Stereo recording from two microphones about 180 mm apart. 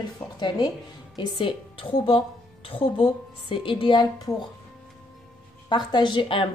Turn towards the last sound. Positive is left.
turn(degrees=30)  # may be behind; listen again after turning